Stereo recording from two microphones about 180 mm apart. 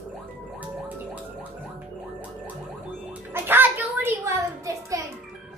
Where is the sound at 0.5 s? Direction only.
10° right (ahead or behind).